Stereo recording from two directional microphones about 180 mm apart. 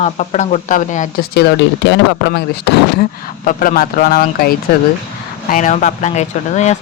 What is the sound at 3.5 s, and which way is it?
Speech, 50° left (ahead or behind).